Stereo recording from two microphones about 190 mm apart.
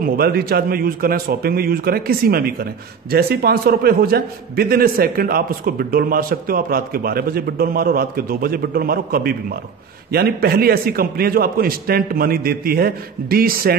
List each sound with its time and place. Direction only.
0.0 s a man's voice: 55° right (ahead or behind)